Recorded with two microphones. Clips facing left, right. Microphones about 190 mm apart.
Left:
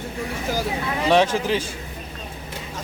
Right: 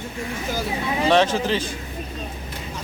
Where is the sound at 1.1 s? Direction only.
10° left (ahead or behind).